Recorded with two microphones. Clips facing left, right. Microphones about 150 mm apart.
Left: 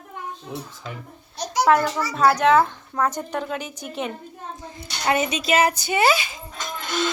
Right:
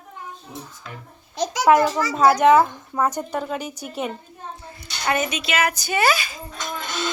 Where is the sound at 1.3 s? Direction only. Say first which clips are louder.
Even; 90° right.